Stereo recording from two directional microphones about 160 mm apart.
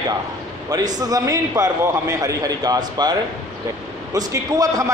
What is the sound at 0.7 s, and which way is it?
A man's voice, 25° right (ahead or behind).